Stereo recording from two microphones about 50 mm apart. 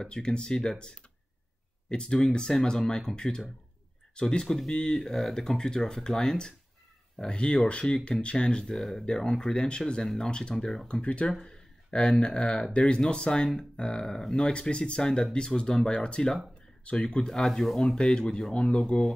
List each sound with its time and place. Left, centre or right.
0.0 s speech: centre
10.9 s speech: left